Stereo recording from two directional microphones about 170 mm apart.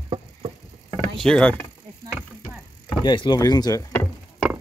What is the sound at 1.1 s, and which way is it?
Mechanisms, 5° left (ahead or behind).